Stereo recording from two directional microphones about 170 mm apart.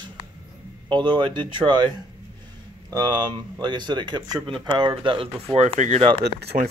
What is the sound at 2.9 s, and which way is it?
Speech, 25° right (ahead or behind).